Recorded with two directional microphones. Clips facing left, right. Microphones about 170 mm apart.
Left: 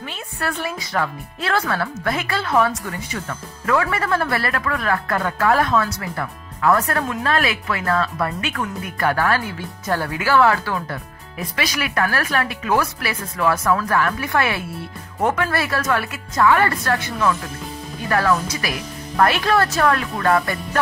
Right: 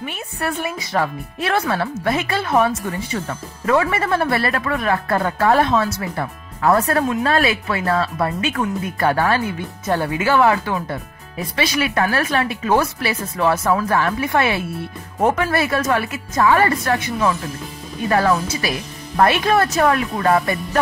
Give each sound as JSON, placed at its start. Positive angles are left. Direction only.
{"t": 0.0, "sound": "a woman's voice", "side_deg": -15}